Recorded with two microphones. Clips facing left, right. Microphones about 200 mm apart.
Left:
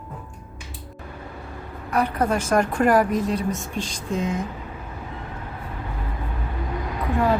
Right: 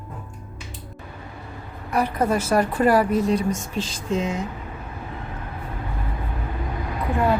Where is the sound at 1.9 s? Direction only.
10° right (ahead or behind).